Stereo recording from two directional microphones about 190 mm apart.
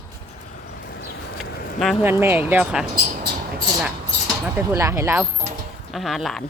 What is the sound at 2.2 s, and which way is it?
Speech, 10° right (ahead or behind).